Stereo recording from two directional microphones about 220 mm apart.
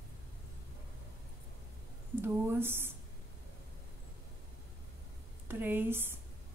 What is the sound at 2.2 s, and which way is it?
Speech, 10° right (ahead or behind).